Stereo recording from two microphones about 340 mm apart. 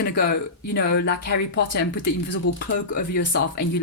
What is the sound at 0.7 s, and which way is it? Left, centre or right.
Speech, left.